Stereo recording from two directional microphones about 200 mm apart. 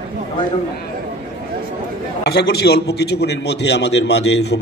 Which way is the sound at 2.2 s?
55° left (ahead or behind).